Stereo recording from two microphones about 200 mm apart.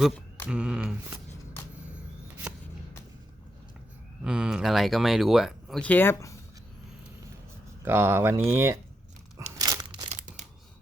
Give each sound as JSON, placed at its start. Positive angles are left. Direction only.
{"t": 0.4, "sound": "speech", "side_deg": -5}
{"t": 4.2, "sound": "speech", "side_deg": -5}
{"t": 7.9, "sound": "speech", "side_deg": -10}
{"t": 9.6, "sound": "crumpling", "side_deg": -20}
{"t": 10.1, "sound": "a sound", "side_deg": -35}